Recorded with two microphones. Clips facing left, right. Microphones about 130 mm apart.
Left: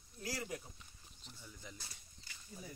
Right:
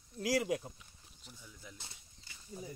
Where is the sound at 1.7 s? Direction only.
25° right (ahead or behind).